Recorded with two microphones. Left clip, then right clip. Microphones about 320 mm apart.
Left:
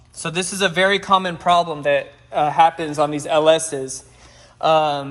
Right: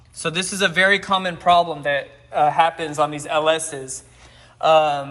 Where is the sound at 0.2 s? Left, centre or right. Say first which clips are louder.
Even; centre.